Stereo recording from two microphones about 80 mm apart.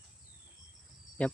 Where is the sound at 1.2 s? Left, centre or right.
Centre.